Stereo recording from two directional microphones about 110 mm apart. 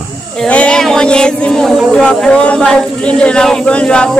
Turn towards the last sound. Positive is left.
turn(degrees=10)  # may be behind; listen again after turning